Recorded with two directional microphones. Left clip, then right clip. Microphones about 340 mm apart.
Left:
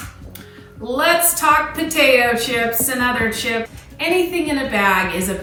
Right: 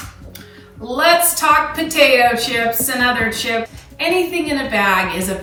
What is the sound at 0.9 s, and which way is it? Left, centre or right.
A woman's voice, centre.